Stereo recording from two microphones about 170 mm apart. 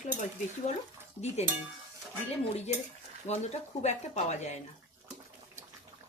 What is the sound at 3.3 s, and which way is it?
Speech, 40° left (ahead or behind).